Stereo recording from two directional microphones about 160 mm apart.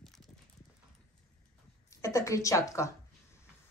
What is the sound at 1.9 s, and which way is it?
A woman's voice, 20° left (ahead or behind).